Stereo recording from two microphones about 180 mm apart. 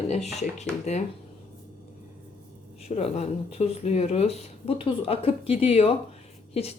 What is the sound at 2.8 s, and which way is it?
Speech, 35° left (ahead or behind).